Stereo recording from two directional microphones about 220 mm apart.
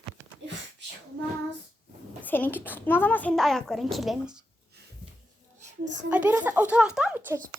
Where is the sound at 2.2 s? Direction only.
10° left (ahead or behind).